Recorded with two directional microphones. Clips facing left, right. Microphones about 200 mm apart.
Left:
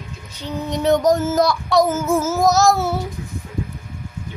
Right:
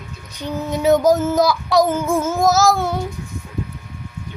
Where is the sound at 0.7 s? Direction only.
5° right (ahead or behind).